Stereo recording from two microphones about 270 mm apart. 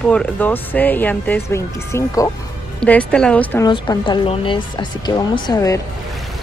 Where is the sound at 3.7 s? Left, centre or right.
Centre.